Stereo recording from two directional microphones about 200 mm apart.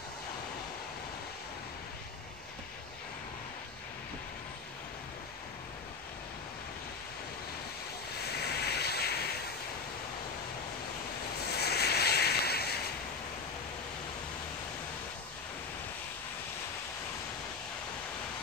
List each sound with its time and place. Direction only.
8.3 s vehicle: 55° left (ahead or behind)
11.3 s ocean: 55° left (ahead or behind)